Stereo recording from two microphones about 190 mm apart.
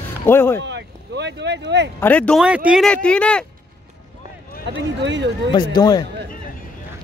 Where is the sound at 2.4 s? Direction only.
5° right (ahead or behind).